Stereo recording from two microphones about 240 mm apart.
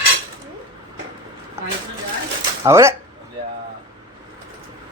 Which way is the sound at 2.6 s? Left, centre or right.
Centre.